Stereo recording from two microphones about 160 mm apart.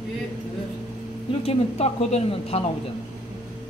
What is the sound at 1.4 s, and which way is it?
Speech, 40° left (ahead or behind).